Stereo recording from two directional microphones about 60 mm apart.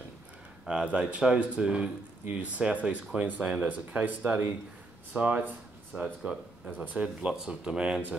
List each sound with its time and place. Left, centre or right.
0.9 s speech: centre
5.9 s speech: centre
6.8 s speech: right
7.2 s speech: centre